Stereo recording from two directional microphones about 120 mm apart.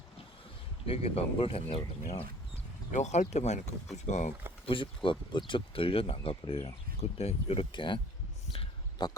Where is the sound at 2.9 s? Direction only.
75° left (ahead or behind).